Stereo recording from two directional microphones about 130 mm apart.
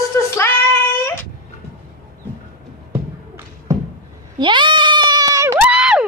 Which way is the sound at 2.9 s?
15° right (ahead or behind).